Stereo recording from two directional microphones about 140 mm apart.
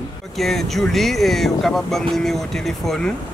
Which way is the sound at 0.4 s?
Centre (ahead or behind).